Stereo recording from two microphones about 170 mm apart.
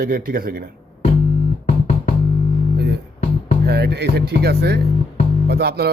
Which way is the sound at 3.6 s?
70° right (ahead or behind).